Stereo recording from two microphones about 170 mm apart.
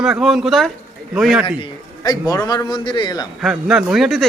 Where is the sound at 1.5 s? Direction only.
30° left (ahead or behind).